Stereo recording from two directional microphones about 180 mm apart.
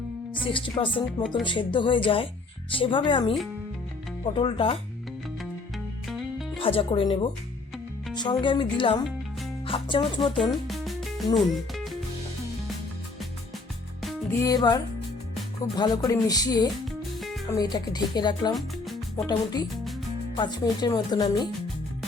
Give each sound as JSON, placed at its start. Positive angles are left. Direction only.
{"t": 0.4, "sound": "speech", "side_deg": 30}
{"t": 6.1, "sound": "music", "side_deg": 0}
{"t": 6.6, "sound": "speech", "side_deg": 30}
{"t": 10.5, "sound": "music", "side_deg": 0}
{"t": 11.3, "sound": "speech", "side_deg": 0}
{"t": 14.3, "sound": "speech", "side_deg": 20}
{"t": 16.8, "sound": "music", "side_deg": 0}
{"t": 17.4, "sound": "speech", "side_deg": 20}
{"t": 18.5, "sound": "music", "side_deg": 0}
{"t": 19.1, "sound": "speech", "side_deg": 20}